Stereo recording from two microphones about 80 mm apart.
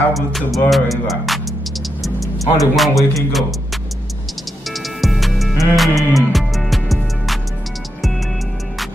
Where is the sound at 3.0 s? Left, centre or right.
Left.